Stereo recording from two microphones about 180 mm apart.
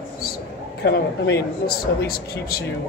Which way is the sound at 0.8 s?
65° left (ahead or behind).